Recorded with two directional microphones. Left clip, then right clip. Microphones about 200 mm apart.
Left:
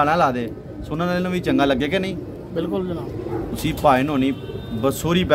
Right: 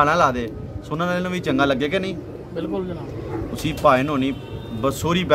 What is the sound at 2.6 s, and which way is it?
Speech, 25° left (ahead or behind).